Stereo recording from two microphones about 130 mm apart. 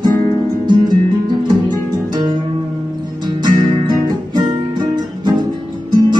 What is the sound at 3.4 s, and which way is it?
Music, 35° right (ahead or behind).